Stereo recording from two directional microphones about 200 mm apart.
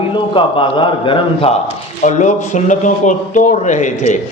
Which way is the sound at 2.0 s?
35° left (ahead or behind).